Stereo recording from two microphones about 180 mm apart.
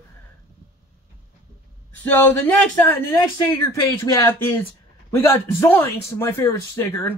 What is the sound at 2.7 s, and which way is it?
A man's voice, 15° left (ahead or behind).